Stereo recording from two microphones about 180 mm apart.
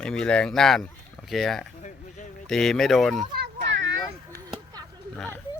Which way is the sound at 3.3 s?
75° right (ahead or behind).